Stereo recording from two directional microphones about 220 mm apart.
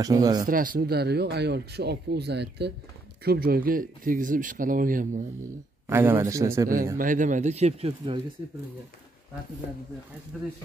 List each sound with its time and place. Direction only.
0.0 s a man's voice: 15° right (ahead or behind)
0.5 s speech: 40° right (ahead or behind)
5.9 s a man's voice: 10° right (ahead or behind)
7.0 s speech: 35° right (ahead or behind)
10.3 s speech: centre (ahead or behind)